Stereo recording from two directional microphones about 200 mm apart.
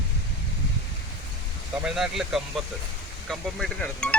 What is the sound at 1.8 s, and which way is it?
Speech, centre (ahead or behind).